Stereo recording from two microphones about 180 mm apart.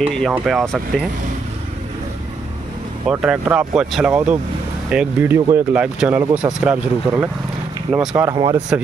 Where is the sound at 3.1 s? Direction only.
5° right (ahead or behind).